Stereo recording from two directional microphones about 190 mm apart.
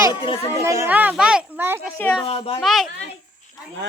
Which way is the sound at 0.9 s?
10° right (ahead or behind).